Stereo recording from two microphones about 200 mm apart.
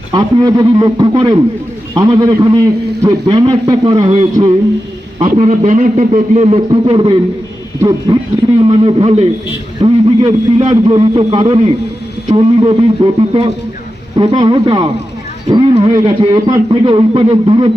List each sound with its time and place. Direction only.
0.1 s speech: 20° right (ahead or behind)
5.4 s a man's voice: 35° right (ahead or behind)